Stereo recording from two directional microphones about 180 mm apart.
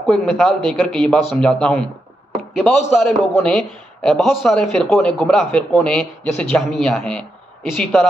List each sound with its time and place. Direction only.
0.0 s speech: 5° left (ahead or behind)
3.4 s speech: centre (ahead or behind)